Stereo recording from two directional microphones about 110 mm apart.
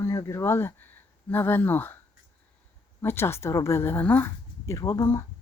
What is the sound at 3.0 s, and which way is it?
Speech, 20° left (ahead or behind).